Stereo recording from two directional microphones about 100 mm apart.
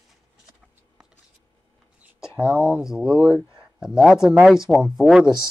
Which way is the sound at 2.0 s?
5° right (ahead or behind).